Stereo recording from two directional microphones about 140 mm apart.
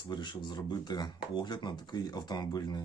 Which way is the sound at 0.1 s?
35° left (ahead or behind).